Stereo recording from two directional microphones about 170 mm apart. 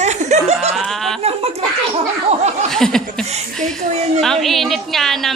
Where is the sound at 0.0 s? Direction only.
40° right (ahead or behind).